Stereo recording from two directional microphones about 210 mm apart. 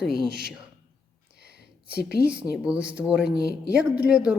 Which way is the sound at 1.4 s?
50° left (ahead or behind).